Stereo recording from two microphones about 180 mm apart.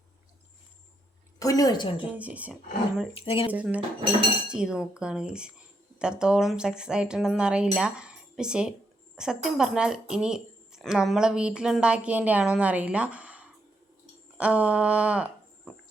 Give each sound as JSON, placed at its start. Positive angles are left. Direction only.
{"t": 1.4, "sound": "a woman's voice", "side_deg": 20}
{"t": 2.1, "sound": "speech", "side_deg": -10}
{"t": 3.2, "sound": "speech", "side_deg": 30}
{"t": 3.5, "sound": "speech", "side_deg": -10}